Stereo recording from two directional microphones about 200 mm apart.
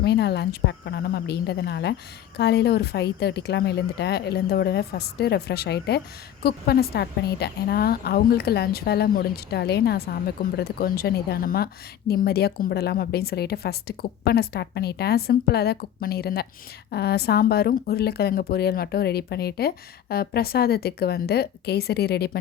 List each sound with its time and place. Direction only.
0.0 s a woman's voice: 55° left (ahead or behind)